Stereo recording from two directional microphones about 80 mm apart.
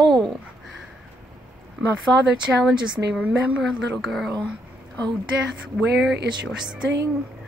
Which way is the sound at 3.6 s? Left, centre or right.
Centre.